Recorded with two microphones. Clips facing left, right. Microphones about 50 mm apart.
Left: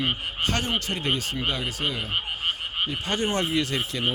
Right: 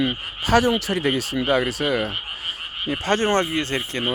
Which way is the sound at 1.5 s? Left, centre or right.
Right.